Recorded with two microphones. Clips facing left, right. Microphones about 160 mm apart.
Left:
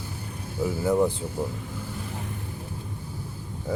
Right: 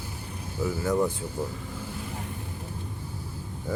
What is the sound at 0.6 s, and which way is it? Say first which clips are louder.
Speech: left 3 dB; 20° left (ahead or behind).